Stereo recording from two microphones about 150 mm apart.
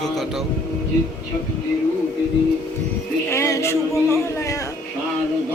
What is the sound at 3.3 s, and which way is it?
Speech, 20° left (ahead or behind).